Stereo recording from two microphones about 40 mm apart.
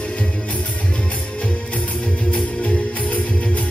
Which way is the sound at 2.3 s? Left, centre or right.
Left.